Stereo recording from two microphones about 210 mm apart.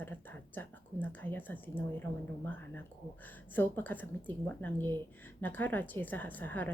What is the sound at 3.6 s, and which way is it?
Speech, 10° left (ahead or behind).